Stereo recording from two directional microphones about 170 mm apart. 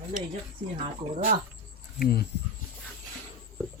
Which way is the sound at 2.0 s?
65° left (ahead or behind).